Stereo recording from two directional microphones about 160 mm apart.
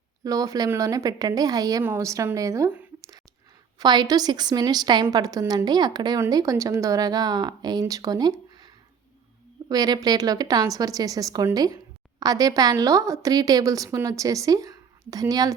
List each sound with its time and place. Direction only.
0.3 s speech: 20° right (ahead or behind)
3.8 s speech: 25° right (ahead or behind)